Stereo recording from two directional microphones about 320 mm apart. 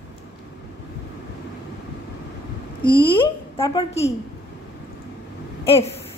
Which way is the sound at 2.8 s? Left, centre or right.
Centre.